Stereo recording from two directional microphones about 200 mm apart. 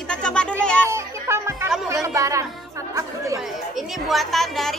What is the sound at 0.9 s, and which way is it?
Music, 15° right (ahead or behind).